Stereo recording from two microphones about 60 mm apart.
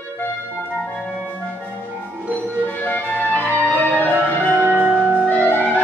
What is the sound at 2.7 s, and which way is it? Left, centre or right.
Music, left.